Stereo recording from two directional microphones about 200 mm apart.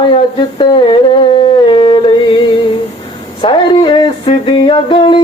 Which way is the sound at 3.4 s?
25° left (ahead or behind).